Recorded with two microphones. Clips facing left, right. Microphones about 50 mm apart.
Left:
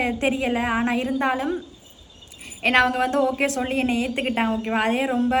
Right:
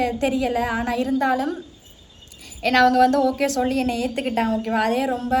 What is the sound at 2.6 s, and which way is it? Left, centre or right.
A woman's voice, left.